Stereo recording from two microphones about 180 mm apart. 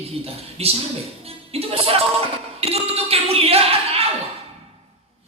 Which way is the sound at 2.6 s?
35° right (ahead or behind).